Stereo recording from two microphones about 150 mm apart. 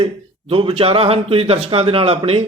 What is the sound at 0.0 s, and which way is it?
Speech, 35° right (ahead or behind).